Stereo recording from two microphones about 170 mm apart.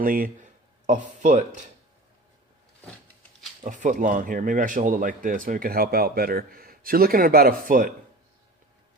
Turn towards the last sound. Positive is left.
turn(degrees=-55)  # may be behind; listen again after turning